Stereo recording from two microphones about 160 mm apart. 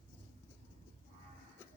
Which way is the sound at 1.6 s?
15° left (ahead or behind).